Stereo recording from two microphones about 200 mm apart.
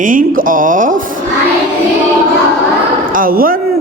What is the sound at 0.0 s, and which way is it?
Speech, 40° right (ahead or behind).